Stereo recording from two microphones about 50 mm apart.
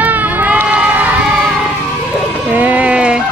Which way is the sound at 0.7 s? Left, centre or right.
Right.